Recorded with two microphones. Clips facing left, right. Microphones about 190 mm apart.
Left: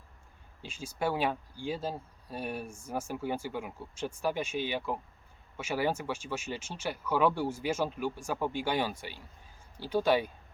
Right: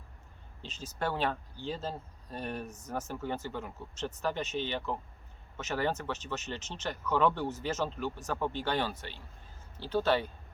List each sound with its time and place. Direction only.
0.6 s speech: 10° left (ahead or behind)